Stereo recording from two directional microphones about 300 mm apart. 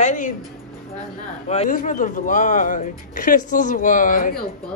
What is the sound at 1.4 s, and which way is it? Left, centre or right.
Speech, left.